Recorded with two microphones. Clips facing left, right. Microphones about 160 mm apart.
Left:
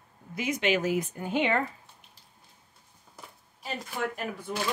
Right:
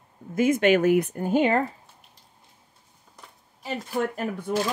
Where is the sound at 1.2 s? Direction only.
40° right (ahead or behind).